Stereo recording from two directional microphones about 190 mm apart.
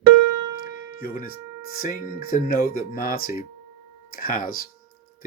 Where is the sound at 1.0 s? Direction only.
50° left (ahead or behind).